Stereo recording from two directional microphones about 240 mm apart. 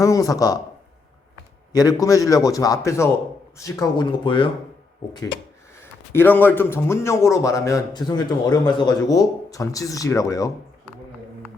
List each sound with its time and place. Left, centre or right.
0.0 s a man's voice: centre
1.7 s a man's voice: centre
6.1 s a man's voice: centre